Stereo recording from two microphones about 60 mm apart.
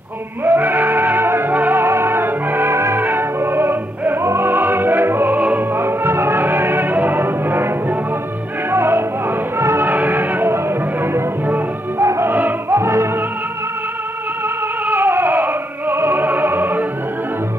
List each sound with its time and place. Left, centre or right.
0.5 s music: right
3.0 s music: right
5.4 s opera: right
5.8 s music: right
9.8 s music: right
12.4 s music: right
12.7 s music: right
14.9 s opera: right